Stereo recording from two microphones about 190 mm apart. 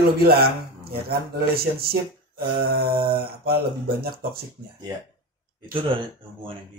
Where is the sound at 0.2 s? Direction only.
55° right (ahead or behind).